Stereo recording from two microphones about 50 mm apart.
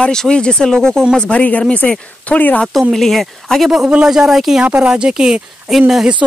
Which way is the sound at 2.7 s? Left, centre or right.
Centre.